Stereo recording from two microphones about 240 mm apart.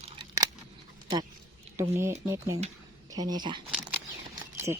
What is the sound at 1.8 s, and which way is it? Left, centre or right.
Speech, centre.